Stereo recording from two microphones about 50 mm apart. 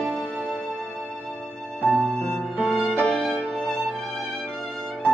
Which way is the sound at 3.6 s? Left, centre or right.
Centre.